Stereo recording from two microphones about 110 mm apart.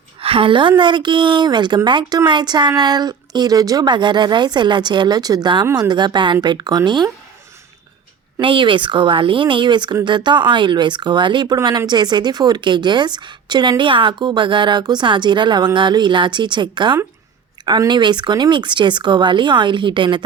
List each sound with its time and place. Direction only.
0.2 s a woman's voice: 55° right (ahead or behind)
8.4 s a woman's voice: 50° right (ahead or behind)